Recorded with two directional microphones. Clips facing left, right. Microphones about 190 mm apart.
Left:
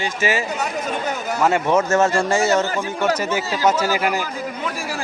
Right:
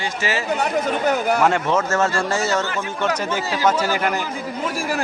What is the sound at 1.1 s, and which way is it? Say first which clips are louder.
Speech: right 6 dB; 65° right (ahead or behind).